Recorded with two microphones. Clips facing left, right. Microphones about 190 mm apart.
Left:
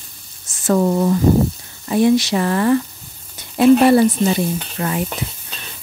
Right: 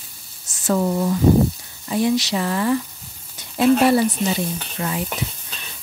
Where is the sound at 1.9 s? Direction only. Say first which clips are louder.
Left 5 dB; 55° left (ahead or behind).